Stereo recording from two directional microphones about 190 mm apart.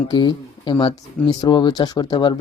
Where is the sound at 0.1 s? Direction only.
25° left (ahead or behind).